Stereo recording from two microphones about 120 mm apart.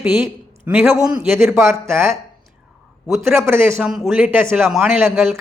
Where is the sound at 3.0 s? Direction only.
Centre (ahead or behind).